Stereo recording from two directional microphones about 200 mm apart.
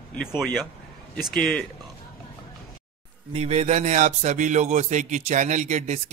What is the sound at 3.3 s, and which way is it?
Speech, 30° right (ahead or behind).